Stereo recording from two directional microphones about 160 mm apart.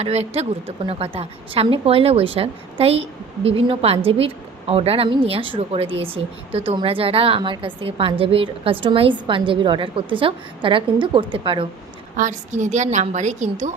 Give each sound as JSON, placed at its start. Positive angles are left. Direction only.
{"t": 0.0, "sound": "a woman's voice", "side_deg": -40}
{"t": 12.1, "sound": "a woman's voice", "side_deg": -50}